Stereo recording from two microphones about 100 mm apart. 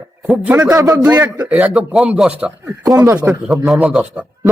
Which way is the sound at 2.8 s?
30° right (ahead or behind).